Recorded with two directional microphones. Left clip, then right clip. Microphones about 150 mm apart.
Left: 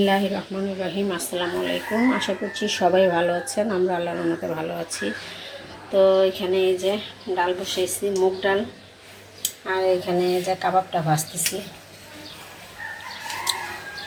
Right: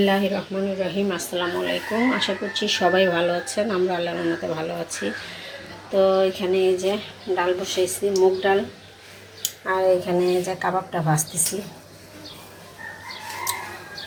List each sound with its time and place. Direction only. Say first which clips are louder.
0.0 s a woman's voice: even; centre (ahead or behind)